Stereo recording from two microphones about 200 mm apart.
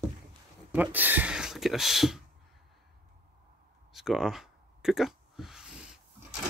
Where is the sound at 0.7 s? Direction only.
10° right (ahead or behind).